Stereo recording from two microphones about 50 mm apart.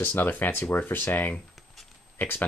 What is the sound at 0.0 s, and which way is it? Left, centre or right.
Speech, left.